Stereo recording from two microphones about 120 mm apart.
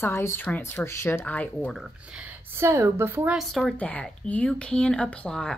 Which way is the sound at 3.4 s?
Centre (ahead or behind).